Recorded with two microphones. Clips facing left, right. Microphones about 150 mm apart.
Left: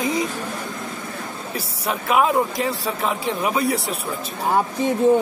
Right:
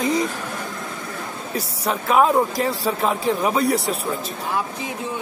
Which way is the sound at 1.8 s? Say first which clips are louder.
Right 2 dB; 5° left (ahead or behind).